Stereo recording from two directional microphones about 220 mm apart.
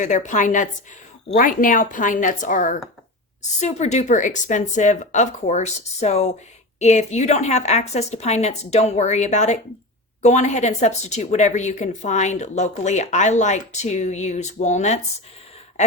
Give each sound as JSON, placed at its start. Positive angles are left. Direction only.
{"t": 0.0, "sound": "a woman's voice", "side_deg": 35}